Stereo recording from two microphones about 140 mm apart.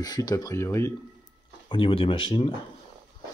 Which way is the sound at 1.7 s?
40° left (ahead or behind).